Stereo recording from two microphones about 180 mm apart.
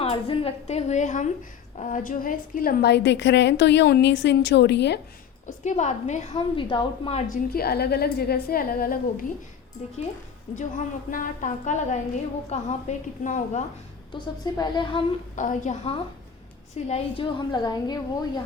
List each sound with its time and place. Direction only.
0.0 s a woman's voice: 30° left (ahead or behind); by 4.9 s 70° left (ahead or behind)
5.5 s a woman's voice: 40° left (ahead or behind)
7.5 s a woman's voice: 60° left (ahead or behind)
11.1 s a woman's voice: 50° left (ahead or behind)
14.1 s a woman's voice: 25° left (ahead or behind)
15.4 s a woman's voice: 45° left (ahead or behind); by 18.4 s 20° left (ahead or behind)